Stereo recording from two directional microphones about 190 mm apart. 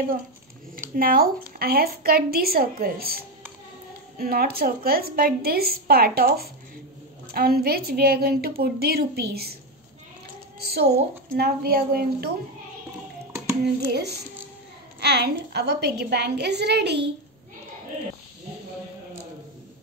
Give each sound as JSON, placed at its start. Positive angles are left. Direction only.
{"t": 0.9, "sound": "a woman's voice", "side_deg": -50}
{"t": 10.6, "sound": "a child's voice", "side_deg": -55}
{"t": 13.7, "sound": "a woman's voice", "side_deg": -60}